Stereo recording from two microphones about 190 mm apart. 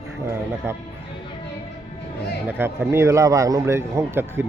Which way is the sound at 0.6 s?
10° right (ahead or behind).